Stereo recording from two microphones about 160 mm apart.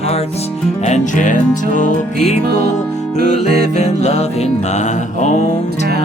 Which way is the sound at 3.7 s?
45° left (ahead or behind).